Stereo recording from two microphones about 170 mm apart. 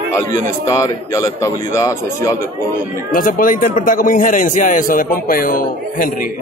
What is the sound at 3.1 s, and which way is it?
A man's voice, 55° left (ahead or behind).